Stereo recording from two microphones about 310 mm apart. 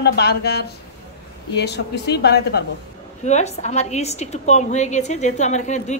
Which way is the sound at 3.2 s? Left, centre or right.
Left.